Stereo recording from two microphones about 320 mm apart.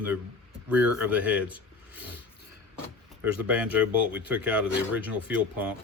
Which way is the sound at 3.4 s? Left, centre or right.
Centre.